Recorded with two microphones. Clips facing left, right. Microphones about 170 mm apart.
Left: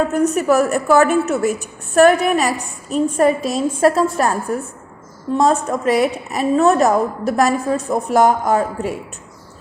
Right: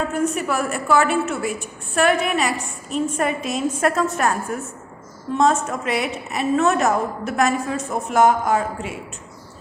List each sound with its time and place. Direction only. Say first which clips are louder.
0.1 s a woman's voice: left 7 dB; 40° left (ahead or behind)